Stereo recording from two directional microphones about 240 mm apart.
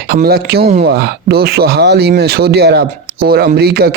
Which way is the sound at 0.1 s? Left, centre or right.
Right.